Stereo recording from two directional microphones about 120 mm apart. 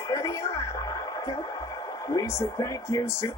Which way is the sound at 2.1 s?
30° left (ahead or behind).